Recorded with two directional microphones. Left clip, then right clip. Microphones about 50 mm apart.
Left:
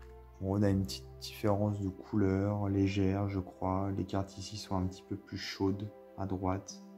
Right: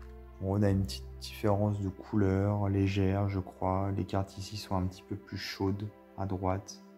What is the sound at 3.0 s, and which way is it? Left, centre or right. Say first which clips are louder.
Speech: right 1 dB; right.